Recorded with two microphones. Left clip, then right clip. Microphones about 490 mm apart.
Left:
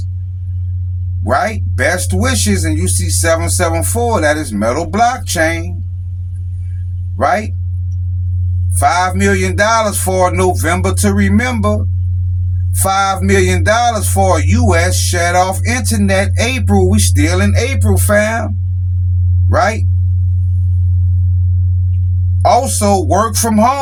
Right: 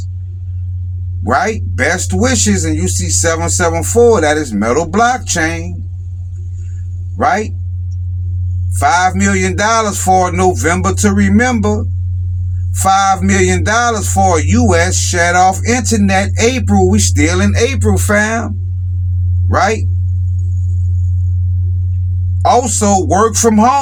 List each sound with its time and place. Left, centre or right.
1.3 s music: left
7.2 s music: left
8.7 s music: left
12.7 s music: left
19.5 s music: left
22.4 s speech: left
23.0 s music: left